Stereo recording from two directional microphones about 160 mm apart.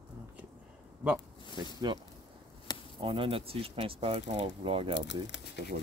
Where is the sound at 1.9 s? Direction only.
30° right (ahead or behind).